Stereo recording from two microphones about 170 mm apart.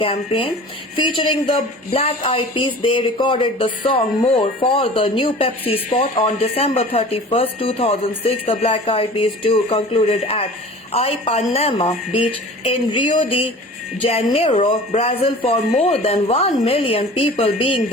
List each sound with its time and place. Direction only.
0.0 s a woman's voice: 35° left (ahead or behind)